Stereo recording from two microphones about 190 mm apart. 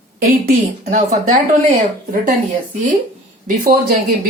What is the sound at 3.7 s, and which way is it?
Speech, 50° right (ahead or behind).